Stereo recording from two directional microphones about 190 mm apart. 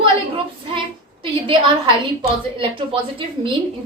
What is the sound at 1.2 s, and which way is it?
A woman's voice, 25° right (ahead or behind).